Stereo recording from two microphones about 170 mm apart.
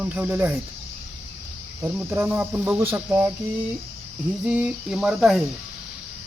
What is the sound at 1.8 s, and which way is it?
Speech, 15° right (ahead or behind).